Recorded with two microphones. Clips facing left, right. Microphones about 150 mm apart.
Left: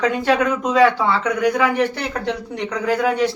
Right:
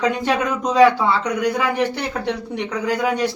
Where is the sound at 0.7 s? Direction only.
15° right (ahead or behind).